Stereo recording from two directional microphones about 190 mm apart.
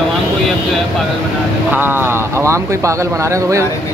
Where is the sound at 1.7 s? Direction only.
10° right (ahead or behind).